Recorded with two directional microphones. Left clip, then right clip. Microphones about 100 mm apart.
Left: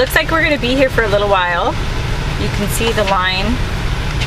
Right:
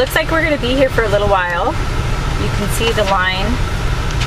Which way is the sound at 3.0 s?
20° left (ahead or behind).